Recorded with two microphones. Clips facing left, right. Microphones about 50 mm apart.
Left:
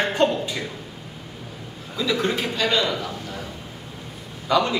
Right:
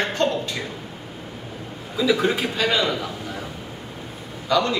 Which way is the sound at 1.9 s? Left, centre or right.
Centre.